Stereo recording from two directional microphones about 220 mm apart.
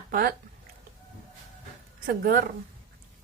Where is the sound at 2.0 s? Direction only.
40° right (ahead or behind).